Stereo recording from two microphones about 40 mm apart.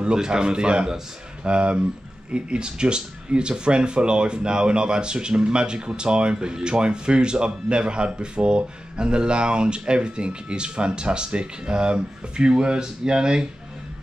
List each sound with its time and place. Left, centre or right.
0.0 s speech: centre